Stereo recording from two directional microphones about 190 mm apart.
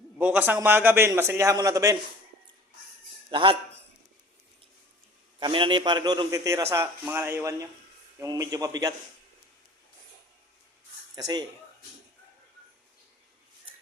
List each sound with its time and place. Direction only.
0.2 s a man's voice: 10° right (ahead or behind)
3.2 s speech: 25° right (ahead or behind)
5.4 s a man's voice: 25° right (ahead or behind)
11.1 s speech: 20° right (ahead or behind)